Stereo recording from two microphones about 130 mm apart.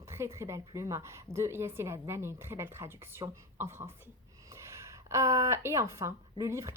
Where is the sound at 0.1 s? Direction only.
20° right (ahead or behind).